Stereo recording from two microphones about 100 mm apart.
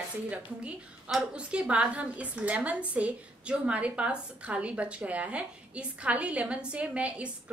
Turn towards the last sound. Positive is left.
turn(degrees=-15)  # may be behind; listen again after turning